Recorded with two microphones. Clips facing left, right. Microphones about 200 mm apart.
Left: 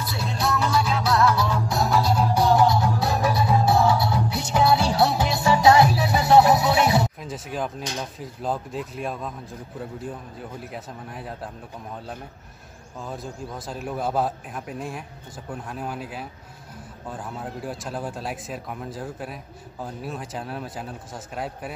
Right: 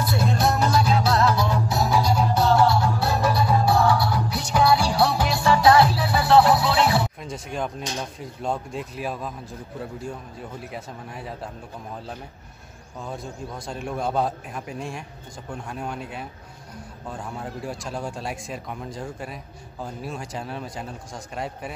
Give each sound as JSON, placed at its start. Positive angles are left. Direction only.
{"t": 0.0, "sound": "music", "side_deg": -50}
{"t": 1.7, "sound": "music", "side_deg": 0}
{"t": 2.2, "sound": "music", "side_deg": 15}
{"t": 7.2, "sound": "speech", "side_deg": 5}
{"t": 13.0, "sound": "speech", "side_deg": 0}